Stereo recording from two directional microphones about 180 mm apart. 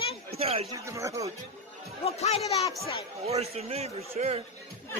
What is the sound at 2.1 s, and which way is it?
Speech, 35° left (ahead or behind).